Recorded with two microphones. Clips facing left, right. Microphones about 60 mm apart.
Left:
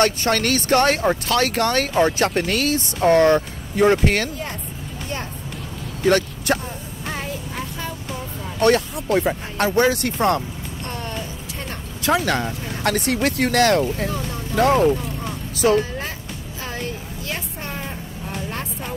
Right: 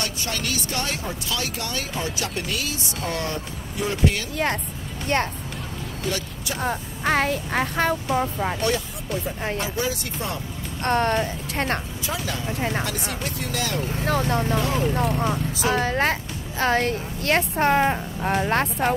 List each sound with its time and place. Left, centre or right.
0.0 s speech: left
6.0 s speech: left
6.6 s a woman's voice: right
8.5 s speech: left
10.8 s speech: right
12.0 s speech: left
12.5 s a woman's voice: right
12.8 s speech: left
14.0 s a woman's voice: right
14.6 s speech: left
15.0 s a woman's voice: right